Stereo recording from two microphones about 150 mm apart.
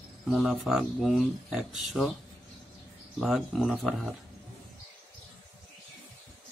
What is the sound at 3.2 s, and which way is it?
Speech, centre (ahead or behind).